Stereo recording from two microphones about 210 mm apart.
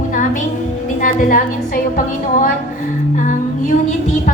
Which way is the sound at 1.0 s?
40° left (ahead or behind).